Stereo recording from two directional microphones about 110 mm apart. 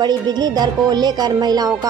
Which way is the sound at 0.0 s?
40° right (ahead or behind).